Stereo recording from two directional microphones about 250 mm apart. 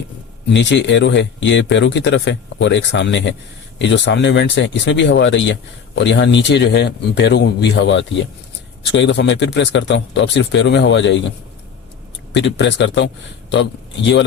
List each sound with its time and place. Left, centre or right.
0.5 s speech: left